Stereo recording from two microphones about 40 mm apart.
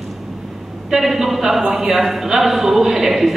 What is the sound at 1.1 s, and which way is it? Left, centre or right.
A man's voice, centre.